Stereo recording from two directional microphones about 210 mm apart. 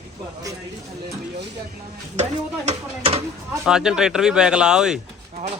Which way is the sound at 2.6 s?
30° right (ahead or behind).